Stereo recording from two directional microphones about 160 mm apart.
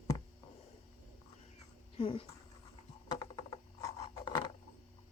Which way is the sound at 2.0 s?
35° left (ahead or behind).